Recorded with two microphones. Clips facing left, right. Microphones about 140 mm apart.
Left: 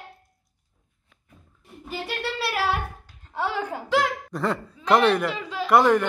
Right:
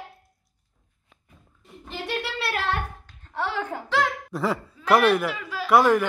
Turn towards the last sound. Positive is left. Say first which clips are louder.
# even
turn(degrees=0)  # may be behind; listen again after turning